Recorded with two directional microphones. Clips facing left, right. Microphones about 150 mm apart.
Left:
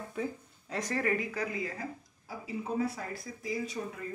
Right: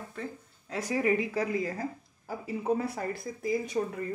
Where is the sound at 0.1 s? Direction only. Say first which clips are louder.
Left 3 dB; 10° left (ahead or behind).